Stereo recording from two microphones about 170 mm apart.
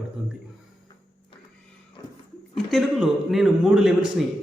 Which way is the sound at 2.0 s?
25° left (ahead or behind).